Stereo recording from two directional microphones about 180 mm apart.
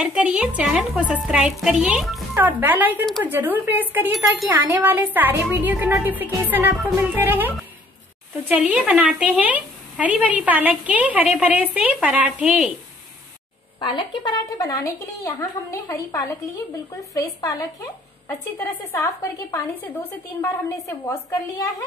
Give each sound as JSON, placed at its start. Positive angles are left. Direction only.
{"t": 0.0, "sound": "a woman's voice", "side_deg": -5}
{"t": 13.7, "sound": "a woman's voice", "side_deg": 25}